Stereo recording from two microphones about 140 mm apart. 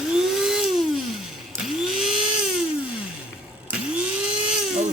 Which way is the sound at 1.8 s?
5° right (ahead or behind).